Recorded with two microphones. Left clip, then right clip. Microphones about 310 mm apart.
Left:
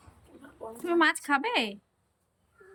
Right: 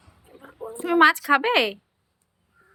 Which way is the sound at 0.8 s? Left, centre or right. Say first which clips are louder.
Right 8 dB; centre.